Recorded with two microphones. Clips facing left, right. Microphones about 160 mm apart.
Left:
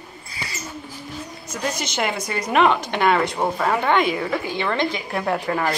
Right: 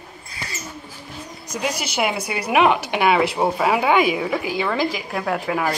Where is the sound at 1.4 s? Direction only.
10° right (ahead or behind).